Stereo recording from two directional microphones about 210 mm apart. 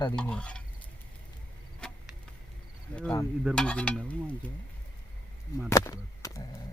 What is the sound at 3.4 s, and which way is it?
Stir, 5° right (ahead or behind).